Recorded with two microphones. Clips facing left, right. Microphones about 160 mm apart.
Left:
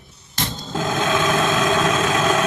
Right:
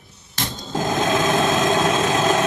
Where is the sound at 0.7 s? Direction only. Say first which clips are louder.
Right 1 dB; 35° right (ahead or behind).